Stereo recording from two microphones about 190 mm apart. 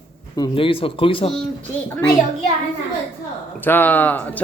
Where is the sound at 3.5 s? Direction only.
10° left (ahead or behind).